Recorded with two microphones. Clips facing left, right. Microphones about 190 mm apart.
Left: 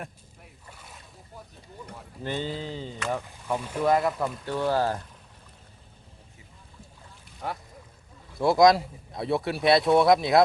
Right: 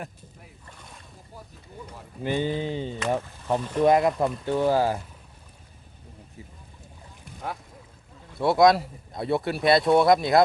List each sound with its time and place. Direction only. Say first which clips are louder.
0.7 s a sound: even; 5° left (ahead or behind)
2.2 s speech: right 5 dB; 15° right (ahead or behind)
3.6 s speech: right 6 dB; 10° left (ahead or behind)
3.8 s speech: right 3 dB; 20° right (ahead or behind)
8.4 s speech: even; centre (ahead or behind)